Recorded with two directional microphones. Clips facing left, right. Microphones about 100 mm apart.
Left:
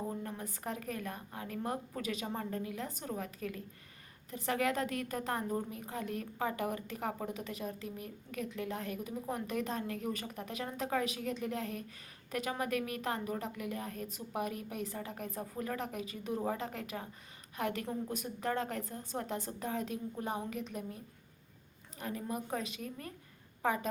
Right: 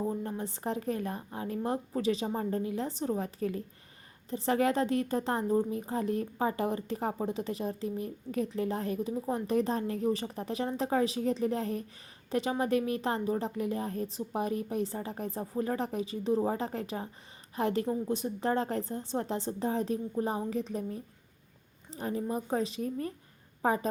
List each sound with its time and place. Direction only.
0.2 s a woman's voice: 30° right (ahead or behind)